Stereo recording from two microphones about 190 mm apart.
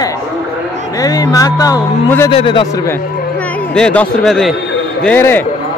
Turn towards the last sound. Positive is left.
turn(degrees=10)  # may be behind; listen again after turning